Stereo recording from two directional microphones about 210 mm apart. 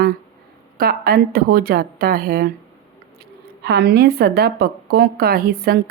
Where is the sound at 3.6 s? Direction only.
50° right (ahead or behind).